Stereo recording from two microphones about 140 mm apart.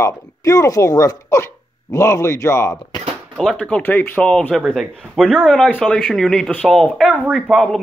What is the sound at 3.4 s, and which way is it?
Speech, 5° left (ahead or behind).